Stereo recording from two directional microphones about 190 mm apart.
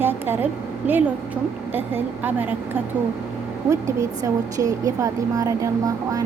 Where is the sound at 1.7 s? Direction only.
10° right (ahead or behind).